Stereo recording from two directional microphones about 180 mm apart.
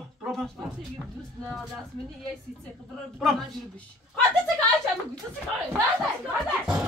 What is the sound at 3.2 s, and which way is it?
Music, 5° left (ahead or behind).